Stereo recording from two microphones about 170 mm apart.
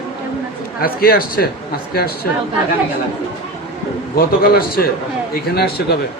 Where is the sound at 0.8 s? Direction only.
60° left (ahead or behind).